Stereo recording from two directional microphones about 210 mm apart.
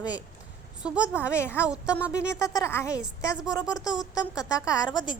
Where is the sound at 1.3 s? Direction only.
10° left (ahead or behind).